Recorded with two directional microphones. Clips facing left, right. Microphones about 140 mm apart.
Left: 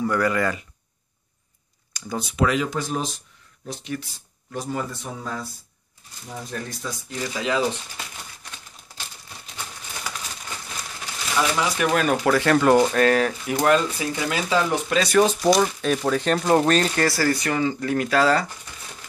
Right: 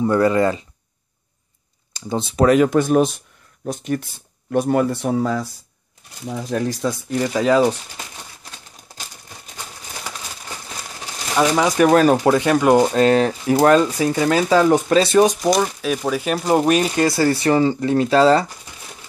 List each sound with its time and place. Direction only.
0.0 s speech: 25° right (ahead or behind)
2.0 s a sound: 25° right (ahead or behind)
2.3 s speech: 45° right (ahead or behind)
3.6 s speech: 50° right (ahead or behind); by 5.5 s 80° right
6.5 s speech: 80° right
7.1 s speech: 45° right (ahead or behind)
11.3 s speech: 40° right (ahead or behind)
12.2 s speech: 20° right (ahead or behind)
13.6 s speech: 40° right (ahead or behind)
15.0 s speech: 20° right (ahead or behind)
15.6 s speech: 5° right (ahead or behind); by 18.5 s 25° right (ahead or behind)